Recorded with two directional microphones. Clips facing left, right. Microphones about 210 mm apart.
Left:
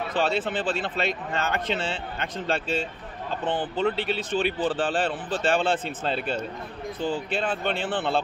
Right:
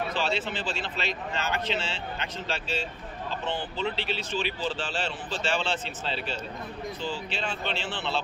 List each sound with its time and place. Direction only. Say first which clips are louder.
0.2 s speech: left 5 dB; 55° left (ahead or behind)